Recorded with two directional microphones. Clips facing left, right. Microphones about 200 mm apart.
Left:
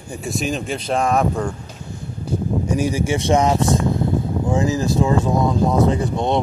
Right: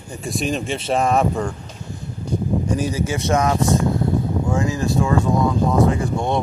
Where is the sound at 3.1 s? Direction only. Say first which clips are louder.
Left 3 dB; 20° left (ahead or behind).